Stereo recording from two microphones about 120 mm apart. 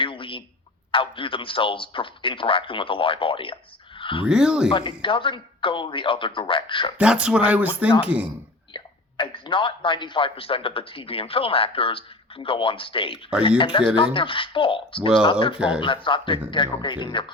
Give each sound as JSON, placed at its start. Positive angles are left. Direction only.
{"t": 0.0, "sound": "a sound", "side_deg": 45}
{"t": 0.9, "sound": "a man's voice", "side_deg": 45}
{"t": 4.3, "sound": "speech", "side_deg": -5}
{"t": 4.7, "sound": "a man's voice", "side_deg": 45}
{"t": 7.0, "sound": "speech", "side_deg": -10}
{"t": 8.7, "sound": "a man's voice", "side_deg": 45}
{"t": 15.5, "sound": "speech", "side_deg": -5}
{"t": 15.8, "sound": "a man's voice", "side_deg": 45}